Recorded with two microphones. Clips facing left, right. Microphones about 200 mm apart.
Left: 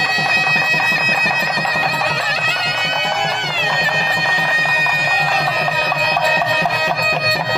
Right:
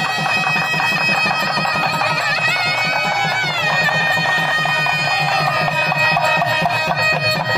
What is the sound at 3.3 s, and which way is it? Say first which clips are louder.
Bagpipes: even; 20° left (ahead or behind).